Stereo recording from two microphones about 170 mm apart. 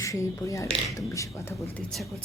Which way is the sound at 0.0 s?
20° left (ahead or behind).